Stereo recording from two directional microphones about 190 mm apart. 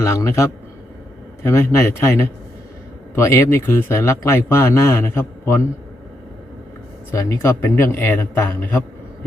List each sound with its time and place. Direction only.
0.0 s speech: 15° left (ahead or behind)
1.5 s speech: 15° left (ahead or behind)
7.1 s speech: 15° left (ahead or behind)